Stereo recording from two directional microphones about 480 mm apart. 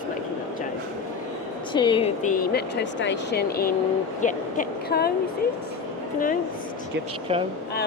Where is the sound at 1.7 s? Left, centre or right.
Centre.